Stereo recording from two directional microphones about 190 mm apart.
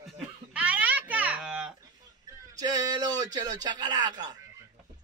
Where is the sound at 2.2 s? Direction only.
20° right (ahead or behind).